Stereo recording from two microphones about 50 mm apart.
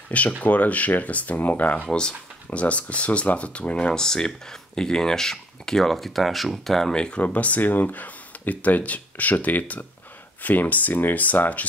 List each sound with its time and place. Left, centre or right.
0.4 s speech: left
1.9 s speech: centre
6.9 s speech: centre
7.2 s speech: left